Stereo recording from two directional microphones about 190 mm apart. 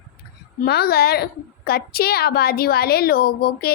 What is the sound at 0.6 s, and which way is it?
A woman's voice, 55° left (ahead or behind).